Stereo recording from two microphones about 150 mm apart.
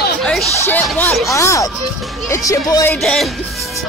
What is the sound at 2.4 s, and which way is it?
Speech, 25° left (ahead or behind).